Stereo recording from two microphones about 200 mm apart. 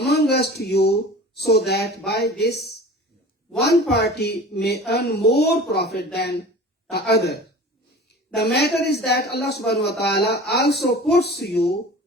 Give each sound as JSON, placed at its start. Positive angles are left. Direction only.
{"t": 0.0, "sound": "a woman's voice", "side_deg": 55}
{"t": 8.5, "sound": "a woman's voice", "side_deg": 55}